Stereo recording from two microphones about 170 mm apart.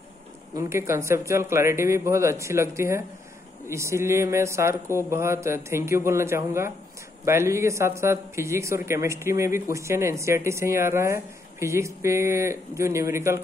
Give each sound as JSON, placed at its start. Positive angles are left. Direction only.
{"t": 0.6, "sound": "speech", "side_deg": -15}